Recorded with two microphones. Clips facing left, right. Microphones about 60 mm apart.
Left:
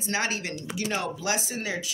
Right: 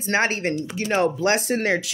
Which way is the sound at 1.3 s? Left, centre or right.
Right.